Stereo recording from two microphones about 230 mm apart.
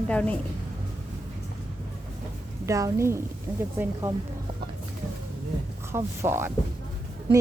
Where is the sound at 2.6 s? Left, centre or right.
Centre.